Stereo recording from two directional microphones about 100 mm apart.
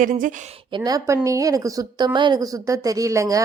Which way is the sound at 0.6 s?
55° right (ahead or behind).